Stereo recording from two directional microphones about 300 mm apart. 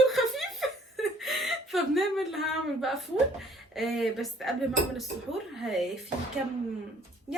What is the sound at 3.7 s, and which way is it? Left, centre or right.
Speech, centre.